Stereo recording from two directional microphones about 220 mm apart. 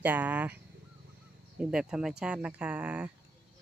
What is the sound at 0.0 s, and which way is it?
Speech, 10° right (ahead or behind).